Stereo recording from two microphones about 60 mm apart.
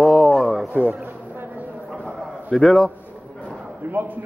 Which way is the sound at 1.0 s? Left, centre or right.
Right.